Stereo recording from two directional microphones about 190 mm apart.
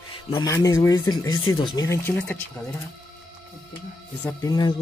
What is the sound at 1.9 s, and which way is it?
Speech, 15° left (ahead or behind).